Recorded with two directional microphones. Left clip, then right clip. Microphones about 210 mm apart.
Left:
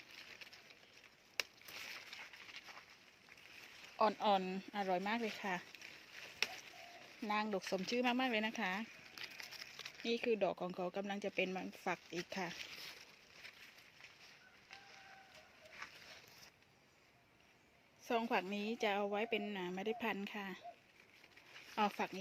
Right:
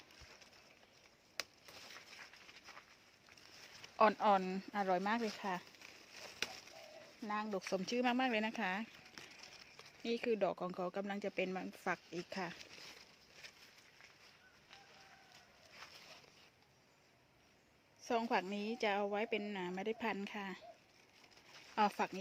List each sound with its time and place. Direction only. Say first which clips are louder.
3.9 s speech: right 4 dB; 15° right (ahead or behind)
4.2 s speech: right 2 dB; 5° right (ahead or behind)
7.2 s speech: left 2 dB; 10° left (ahead or behind)
7.7 s speech: right 2 dB; centre (ahead or behind)
18.0 s speech: right 1 dB; centre (ahead or behind)
21.8 s speech: right 3 dB; 5° right (ahead or behind)